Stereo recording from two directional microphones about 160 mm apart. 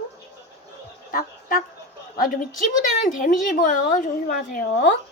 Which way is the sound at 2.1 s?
60° left (ahead or behind).